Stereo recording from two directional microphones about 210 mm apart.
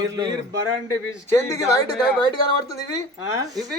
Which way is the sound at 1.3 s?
15° left (ahead or behind).